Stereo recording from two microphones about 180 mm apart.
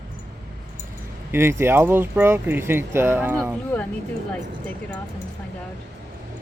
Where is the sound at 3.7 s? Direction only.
10° left (ahead or behind).